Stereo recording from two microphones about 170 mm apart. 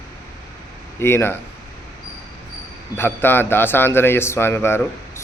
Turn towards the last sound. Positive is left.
turn(degrees=15)  # may be behind; listen again after turning